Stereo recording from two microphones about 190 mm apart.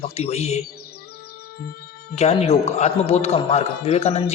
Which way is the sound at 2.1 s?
35° left (ahead or behind).